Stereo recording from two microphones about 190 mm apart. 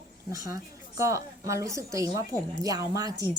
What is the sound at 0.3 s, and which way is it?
A woman's voice, 15° right (ahead or behind).